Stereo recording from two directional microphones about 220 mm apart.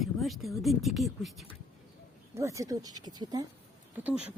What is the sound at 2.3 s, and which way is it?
Speech, 15° right (ahead or behind).